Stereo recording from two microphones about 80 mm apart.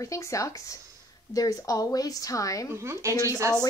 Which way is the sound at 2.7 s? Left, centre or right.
Right.